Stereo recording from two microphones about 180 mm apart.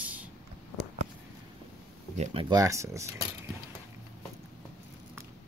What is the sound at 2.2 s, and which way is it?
Speech, 30° right (ahead or behind).